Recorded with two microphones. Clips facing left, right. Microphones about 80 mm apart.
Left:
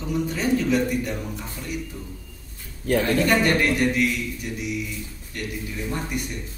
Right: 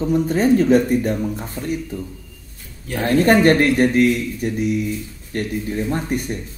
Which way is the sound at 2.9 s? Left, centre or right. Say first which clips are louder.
Right 4 dB; right.